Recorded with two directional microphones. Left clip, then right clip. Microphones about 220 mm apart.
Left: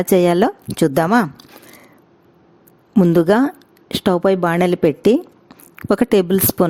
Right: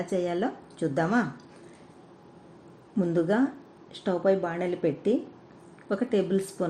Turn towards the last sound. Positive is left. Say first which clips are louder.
# left 11 dB
turn(degrees=55)  # may be behind; listen again after turning